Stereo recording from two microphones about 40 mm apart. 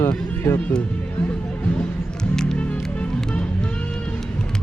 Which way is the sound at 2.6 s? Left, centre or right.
Left.